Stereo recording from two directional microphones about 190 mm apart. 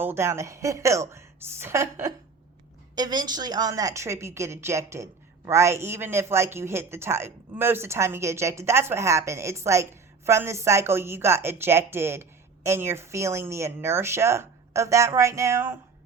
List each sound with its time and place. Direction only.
0.0 s speech: 15° right (ahead or behind)